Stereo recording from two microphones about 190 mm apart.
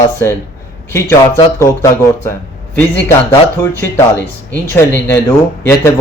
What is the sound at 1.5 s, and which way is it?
Speech, 15° left (ahead or behind).